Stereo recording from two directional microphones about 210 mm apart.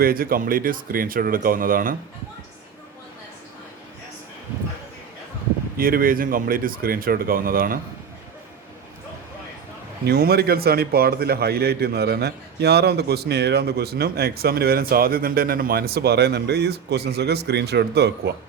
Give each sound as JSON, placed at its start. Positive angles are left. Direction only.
{"t": 0.0, "sound": "a man's voice", "side_deg": -45}
{"t": 5.7, "sound": "a man's voice", "side_deg": -45}
{"t": 10.1, "sound": "a man's voice", "side_deg": -50}